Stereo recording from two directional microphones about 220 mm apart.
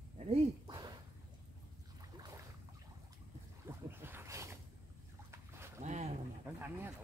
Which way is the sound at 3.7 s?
10° right (ahead or behind).